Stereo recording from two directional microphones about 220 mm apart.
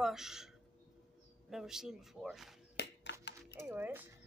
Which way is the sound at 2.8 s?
50° left (ahead or behind).